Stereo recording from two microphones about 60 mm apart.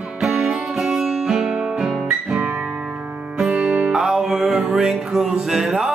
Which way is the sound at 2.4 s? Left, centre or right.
Right.